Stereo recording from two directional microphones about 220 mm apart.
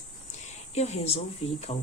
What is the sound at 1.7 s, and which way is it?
Speech, 30° left (ahead or behind).